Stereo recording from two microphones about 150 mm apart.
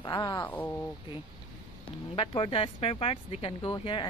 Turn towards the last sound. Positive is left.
turn(degrees=30)  # may be behind; listen again after turning